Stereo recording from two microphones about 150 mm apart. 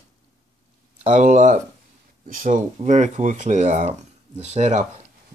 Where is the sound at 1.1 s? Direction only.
55° right (ahead or behind).